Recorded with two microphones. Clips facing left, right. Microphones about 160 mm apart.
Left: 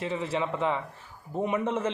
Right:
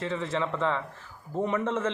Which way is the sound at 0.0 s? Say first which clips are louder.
Even; 10° left (ahead or behind).